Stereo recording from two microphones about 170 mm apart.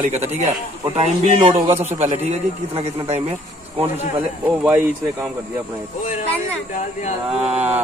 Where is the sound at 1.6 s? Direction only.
15° right (ahead or behind).